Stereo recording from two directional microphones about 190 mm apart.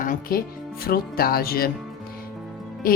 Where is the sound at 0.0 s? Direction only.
50° left (ahead or behind).